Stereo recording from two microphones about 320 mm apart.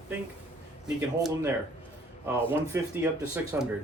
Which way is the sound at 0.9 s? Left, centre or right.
Centre.